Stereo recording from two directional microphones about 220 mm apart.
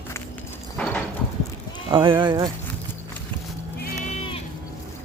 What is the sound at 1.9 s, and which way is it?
Speech, 20° right (ahead or behind).